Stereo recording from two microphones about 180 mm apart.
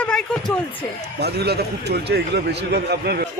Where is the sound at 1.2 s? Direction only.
65° right (ahead or behind).